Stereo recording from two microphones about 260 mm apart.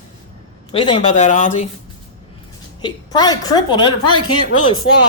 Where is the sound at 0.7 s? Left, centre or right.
Centre.